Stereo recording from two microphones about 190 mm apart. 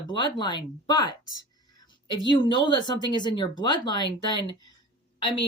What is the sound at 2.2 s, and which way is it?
Speech, 25° left (ahead or behind).